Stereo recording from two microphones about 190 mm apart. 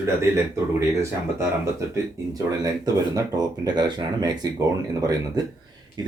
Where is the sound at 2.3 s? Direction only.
20° right (ahead or behind).